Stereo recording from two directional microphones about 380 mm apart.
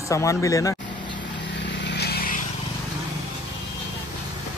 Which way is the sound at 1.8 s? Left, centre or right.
Left.